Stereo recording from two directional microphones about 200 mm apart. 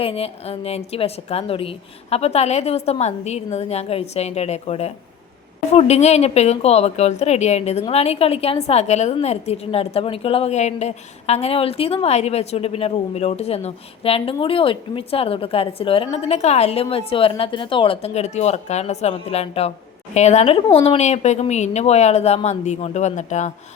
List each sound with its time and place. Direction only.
0.0 s a woman's voice: 30° left (ahead or behind)